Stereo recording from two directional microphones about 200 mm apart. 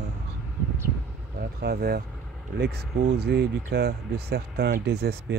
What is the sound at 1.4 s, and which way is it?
Speech, 50° right (ahead or behind).